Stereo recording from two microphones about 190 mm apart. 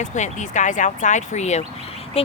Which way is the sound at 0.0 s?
40° left (ahead or behind).